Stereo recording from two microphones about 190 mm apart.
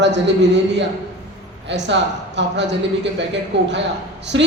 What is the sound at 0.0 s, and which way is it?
A man's voice, 70° right (ahead or behind).